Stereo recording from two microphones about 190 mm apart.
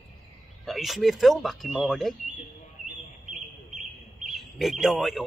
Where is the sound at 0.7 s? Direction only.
Centre (ahead or behind).